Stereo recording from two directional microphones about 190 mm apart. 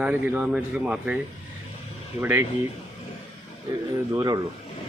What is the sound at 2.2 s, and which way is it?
Speech, 10° right (ahead or behind).